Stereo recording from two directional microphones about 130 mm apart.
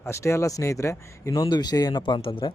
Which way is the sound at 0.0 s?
20° left (ahead or behind).